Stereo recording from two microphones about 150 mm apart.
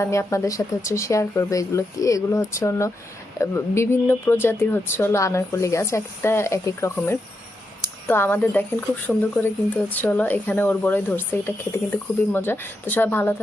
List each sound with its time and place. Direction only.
0.0 s speech: 20° left (ahead or behind)